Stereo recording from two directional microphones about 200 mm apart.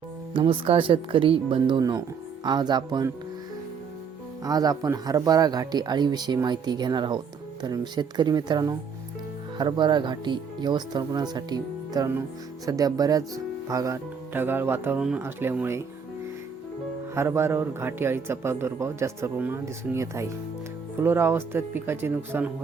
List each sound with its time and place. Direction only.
0.3 s speech: 25° right (ahead or behind)
4.4 s speech: 20° right (ahead or behind)
17.2 s speech: 10° right (ahead or behind)